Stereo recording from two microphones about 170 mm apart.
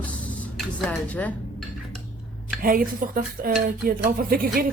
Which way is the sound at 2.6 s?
55° right (ahead or behind).